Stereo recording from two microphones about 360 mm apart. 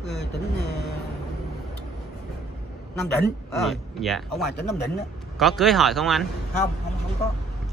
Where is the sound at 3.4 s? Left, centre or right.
Centre.